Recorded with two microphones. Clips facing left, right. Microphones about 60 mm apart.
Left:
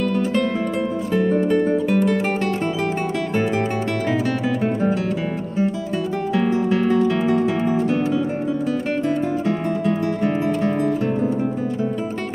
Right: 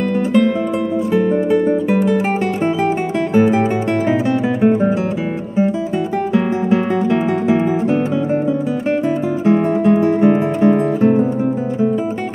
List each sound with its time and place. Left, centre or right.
1.1 s music: centre
3.3 s music: centre
6.3 s music: right
9.5 s music: right